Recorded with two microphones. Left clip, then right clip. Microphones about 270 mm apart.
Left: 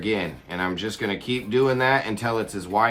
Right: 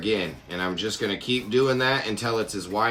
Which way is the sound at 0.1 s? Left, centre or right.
Left.